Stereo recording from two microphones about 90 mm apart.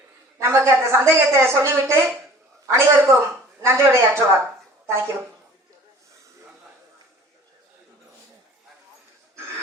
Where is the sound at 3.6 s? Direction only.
30° right (ahead or behind).